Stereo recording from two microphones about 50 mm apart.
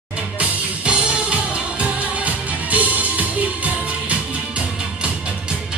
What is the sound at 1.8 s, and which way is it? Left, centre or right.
Music, right.